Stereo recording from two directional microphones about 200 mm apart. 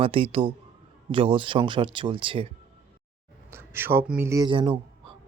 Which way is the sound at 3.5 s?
10° right (ahead or behind).